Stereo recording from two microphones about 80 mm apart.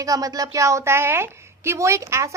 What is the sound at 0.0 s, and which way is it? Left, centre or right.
A woman's voice, right.